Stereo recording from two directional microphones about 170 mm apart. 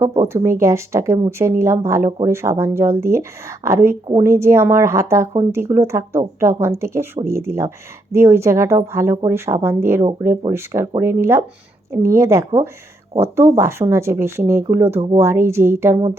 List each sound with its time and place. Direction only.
0.2 s speech: 15° right (ahead or behind)